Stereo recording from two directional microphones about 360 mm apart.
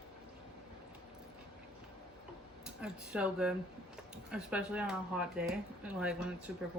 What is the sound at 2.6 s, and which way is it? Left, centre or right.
Speech, centre.